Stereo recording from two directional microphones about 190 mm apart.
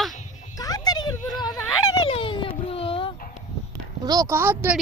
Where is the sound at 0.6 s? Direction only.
20° left (ahead or behind).